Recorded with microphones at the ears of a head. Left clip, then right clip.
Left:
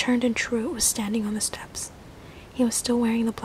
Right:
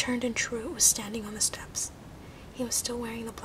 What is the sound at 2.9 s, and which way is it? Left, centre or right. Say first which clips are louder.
Speech: left 11 dB; left.